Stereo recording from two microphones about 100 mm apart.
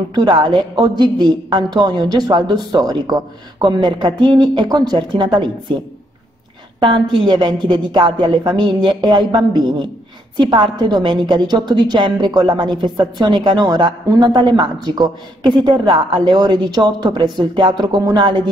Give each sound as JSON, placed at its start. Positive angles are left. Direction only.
{"t": 0.1, "sound": "a woman's voice", "side_deg": -50}
{"t": 6.8, "sound": "a woman's voice", "side_deg": -55}